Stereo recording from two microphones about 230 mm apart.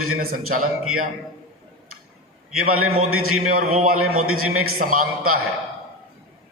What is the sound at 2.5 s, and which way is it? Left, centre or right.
A man's voice, right.